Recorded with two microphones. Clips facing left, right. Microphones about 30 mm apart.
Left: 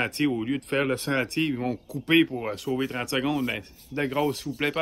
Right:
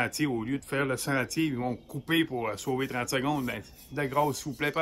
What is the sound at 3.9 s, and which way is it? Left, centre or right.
Speech, left.